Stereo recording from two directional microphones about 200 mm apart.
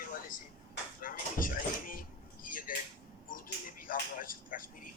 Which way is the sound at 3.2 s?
45° left (ahead or behind).